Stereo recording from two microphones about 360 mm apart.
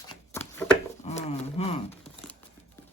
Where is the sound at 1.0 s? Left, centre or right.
Centre.